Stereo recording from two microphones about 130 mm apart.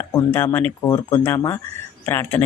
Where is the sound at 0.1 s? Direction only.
20° left (ahead or behind).